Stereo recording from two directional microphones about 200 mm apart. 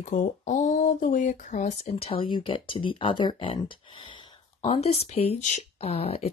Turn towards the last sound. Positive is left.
turn(degrees=30)  # may be behind; listen again after turning